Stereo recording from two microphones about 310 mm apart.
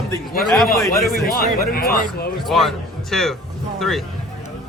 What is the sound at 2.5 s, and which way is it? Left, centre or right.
Speech, centre.